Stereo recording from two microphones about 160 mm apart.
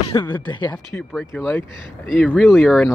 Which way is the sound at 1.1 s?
5° left (ahead or behind).